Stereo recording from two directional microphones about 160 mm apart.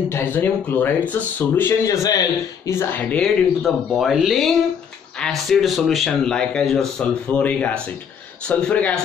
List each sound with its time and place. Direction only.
0.1 s speech: 15° left (ahead or behind)
3.6 s speech: centre (ahead or behind)